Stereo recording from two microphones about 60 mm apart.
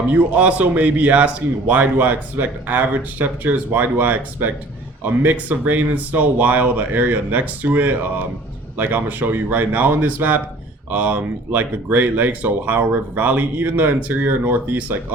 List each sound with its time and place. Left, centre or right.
0.1 s speech: right